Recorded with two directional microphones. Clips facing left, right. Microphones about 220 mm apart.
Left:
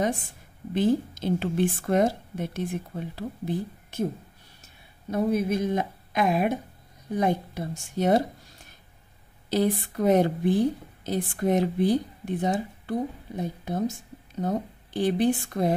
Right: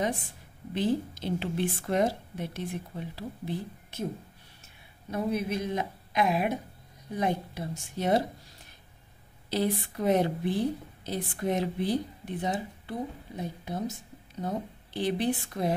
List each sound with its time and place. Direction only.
0.7 s a woman's voice: 45° left (ahead or behind)
5.1 s a woman's voice: 45° left (ahead or behind)
9.5 s a woman's voice: 45° left (ahead or behind)